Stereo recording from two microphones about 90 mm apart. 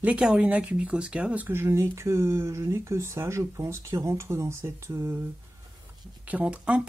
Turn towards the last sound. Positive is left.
turn(degrees=-15)  # may be behind; listen again after turning